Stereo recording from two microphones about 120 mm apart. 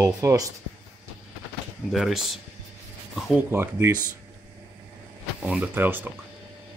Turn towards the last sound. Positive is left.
turn(degrees=-15)  # may be behind; listen again after turning